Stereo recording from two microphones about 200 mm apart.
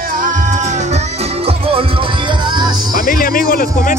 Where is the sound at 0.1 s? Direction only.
40° right (ahead or behind); by 2.8 s 20° right (ahead or behind).